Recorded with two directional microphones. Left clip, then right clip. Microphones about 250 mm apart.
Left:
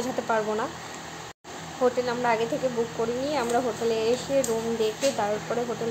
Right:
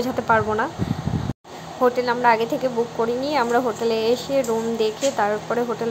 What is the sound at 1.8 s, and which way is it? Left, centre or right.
A woman's voice, centre.